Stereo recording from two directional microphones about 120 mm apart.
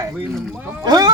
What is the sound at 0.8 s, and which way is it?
Speech, 35° right (ahead or behind).